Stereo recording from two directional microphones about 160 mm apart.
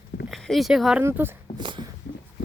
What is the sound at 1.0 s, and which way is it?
Speech, 15° right (ahead or behind).